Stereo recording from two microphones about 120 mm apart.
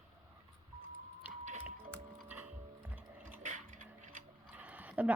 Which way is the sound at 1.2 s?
15° right (ahead or behind).